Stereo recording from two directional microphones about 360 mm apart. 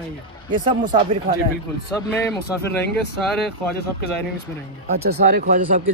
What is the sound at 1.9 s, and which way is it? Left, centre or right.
Speech, centre.